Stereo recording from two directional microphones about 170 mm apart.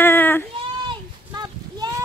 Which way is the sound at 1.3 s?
25° right (ahead or behind).